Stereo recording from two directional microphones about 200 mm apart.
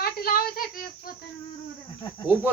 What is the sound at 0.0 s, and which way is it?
Child singing, 45° left (ahead or behind).